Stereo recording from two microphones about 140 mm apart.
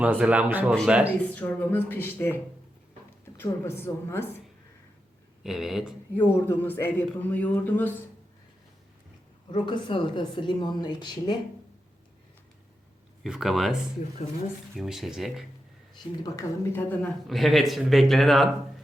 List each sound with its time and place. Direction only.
0.0 s a man's voice: 10° right (ahead or behind)
1.2 s speech: 10° left (ahead or behind)
5.4 s speech: 5° right (ahead or behind)
6.1 s speech: 10° left (ahead or behind)
9.5 s speech: 35° left (ahead or behind)
13.2 s speech: 5° right (ahead or behind)
14.8 s speech: 5° right (ahead or behind)
16.2 s speech: 20° left (ahead or behind)
16.9 s speech: 5° left (ahead or behind)